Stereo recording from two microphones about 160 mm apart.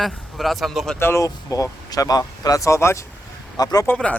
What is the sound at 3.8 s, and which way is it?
Speech, 5° left (ahead or behind).